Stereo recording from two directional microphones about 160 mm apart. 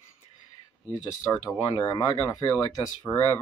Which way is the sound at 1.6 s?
25° left (ahead or behind).